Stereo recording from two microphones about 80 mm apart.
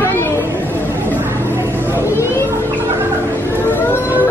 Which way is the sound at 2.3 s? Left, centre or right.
Left.